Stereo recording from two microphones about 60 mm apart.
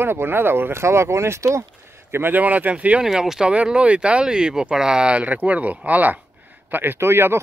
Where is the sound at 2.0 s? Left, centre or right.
Right.